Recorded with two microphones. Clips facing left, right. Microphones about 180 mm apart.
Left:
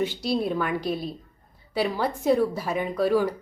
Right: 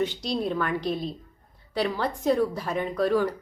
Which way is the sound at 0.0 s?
5° left (ahead or behind).